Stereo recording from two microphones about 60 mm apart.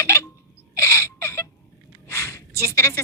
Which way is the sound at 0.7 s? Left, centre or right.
Left.